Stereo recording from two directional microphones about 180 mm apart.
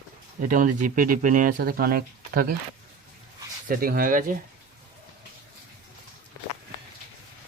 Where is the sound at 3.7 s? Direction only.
55° right (ahead or behind).